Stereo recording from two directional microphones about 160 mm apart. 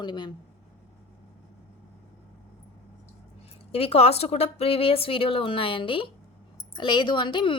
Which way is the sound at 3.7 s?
40° left (ahead or behind).